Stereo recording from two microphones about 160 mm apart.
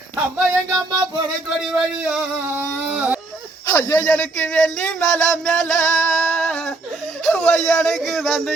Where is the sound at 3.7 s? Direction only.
10° left (ahead or behind).